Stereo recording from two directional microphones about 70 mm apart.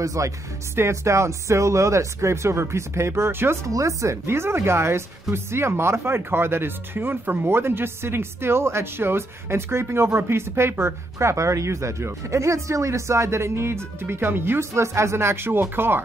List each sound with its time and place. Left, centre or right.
0.0 s speech: right
3.6 s speech: right